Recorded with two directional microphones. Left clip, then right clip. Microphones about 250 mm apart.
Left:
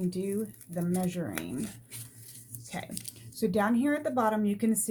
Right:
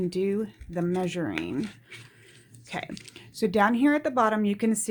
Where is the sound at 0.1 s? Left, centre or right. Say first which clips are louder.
Right 6 dB; right.